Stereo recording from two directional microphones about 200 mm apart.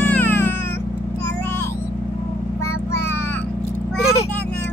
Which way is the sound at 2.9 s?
10° left (ahead or behind).